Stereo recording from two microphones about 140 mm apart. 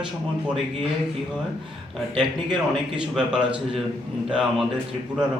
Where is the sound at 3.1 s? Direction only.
5° right (ahead or behind).